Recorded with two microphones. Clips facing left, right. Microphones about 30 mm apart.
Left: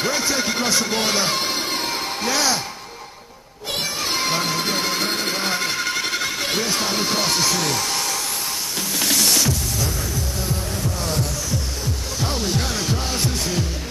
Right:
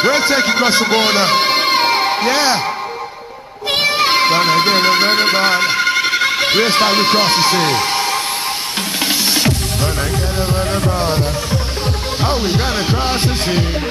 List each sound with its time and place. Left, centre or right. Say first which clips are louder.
0.0 s speech: right 8 dB; right
3.7 s speech: right 10 dB; right
9.0 s music: right 3 dB; right
10.5 s music: right 10 dB; right
11.1 s music: right 7 dB; right